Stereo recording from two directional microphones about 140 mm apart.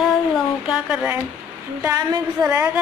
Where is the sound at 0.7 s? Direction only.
5° right (ahead or behind).